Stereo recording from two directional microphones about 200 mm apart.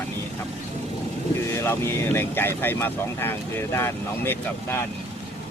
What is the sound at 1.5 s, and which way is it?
Speech, 10° left (ahead or behind).